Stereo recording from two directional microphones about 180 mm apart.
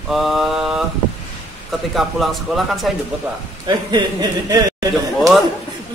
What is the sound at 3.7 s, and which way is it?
Speech, 25° right (ahead or behind).